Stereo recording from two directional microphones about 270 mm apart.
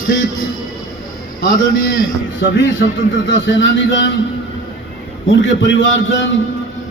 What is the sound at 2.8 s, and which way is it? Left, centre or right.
Speech, left.